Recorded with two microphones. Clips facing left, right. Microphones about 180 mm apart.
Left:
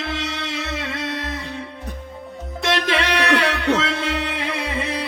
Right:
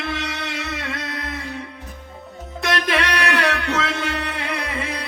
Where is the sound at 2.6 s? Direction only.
25° left (ahead or behind).